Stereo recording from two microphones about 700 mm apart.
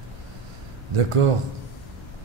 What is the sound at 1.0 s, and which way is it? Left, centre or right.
Speech, right.